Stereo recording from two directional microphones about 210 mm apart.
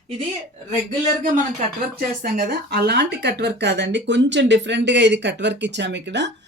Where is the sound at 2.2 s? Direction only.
50° right (ahead or behind).